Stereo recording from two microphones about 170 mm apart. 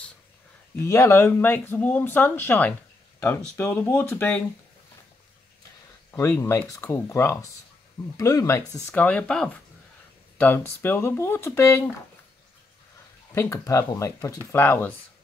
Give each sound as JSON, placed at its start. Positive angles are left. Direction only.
{"t": 0.8, "sound": "speech", "side_deg": 15}
{"t": 6.1, "sound": "speech", "side_deg": 15}
{"t": 13.3, "sound": "speech", "side_deg": 15}